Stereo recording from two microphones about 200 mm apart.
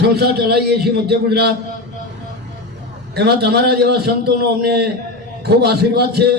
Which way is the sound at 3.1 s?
55° right (ahead or behind).